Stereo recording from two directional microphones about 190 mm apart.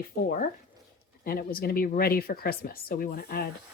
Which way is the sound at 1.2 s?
50° left (ahead or behind).